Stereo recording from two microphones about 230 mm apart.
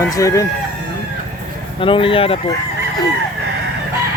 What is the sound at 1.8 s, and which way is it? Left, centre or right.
Speech, left.